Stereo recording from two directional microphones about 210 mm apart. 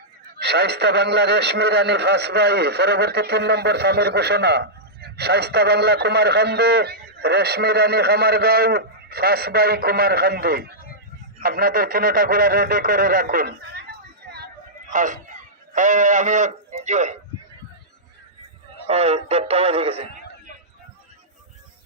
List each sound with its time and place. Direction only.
0.3 s a man's voice: 50° right (ahead or behind)
14.3 s a sound: 50° right (ahead or behind)
14.9 s speech: 40° right (ahead or behind)
18.9 s speech: 30° right (ahead or behind)